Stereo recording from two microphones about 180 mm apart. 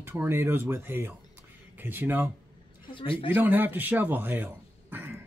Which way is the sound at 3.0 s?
30° left (ahead or behind).